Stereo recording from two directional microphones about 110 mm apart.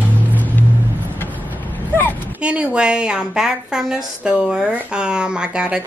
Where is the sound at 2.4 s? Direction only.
10° right (ahead or behind).